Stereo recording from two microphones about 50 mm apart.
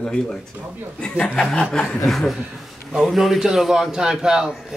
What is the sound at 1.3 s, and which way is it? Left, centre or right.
Speech, centre.